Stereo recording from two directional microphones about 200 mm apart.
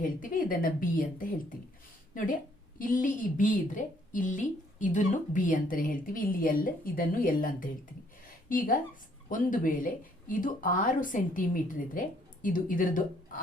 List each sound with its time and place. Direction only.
0.0 s a woman's voice: 45° left (ahead or behind)